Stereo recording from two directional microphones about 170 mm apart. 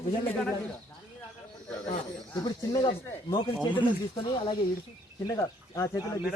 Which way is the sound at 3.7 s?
30° left (ahead or behind).